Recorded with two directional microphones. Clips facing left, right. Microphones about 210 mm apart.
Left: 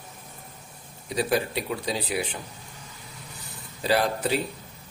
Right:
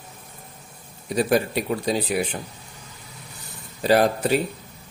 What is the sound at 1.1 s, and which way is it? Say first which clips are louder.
Speech: right 5 dB; 50° right (ahead or behind).